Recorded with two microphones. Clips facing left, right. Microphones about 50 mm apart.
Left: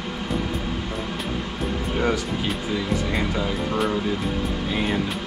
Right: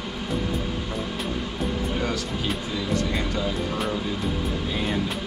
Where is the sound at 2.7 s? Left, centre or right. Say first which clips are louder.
Left 1 dB; centre.